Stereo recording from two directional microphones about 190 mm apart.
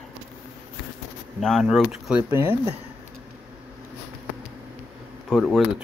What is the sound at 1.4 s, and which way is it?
Speech, centre (ahead or behind).